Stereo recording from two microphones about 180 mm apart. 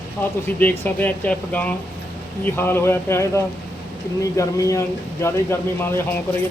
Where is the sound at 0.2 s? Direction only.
10° left (ahead or behind).